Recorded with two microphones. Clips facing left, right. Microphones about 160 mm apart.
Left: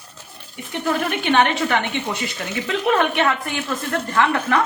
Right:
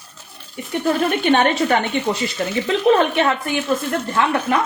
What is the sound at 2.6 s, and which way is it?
Speech, 25° right (ahead or behind).